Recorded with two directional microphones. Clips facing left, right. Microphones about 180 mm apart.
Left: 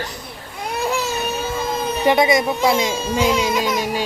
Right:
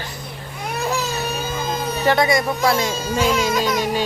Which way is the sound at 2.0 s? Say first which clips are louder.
Left 2 dB; 20° left (ahead or behind).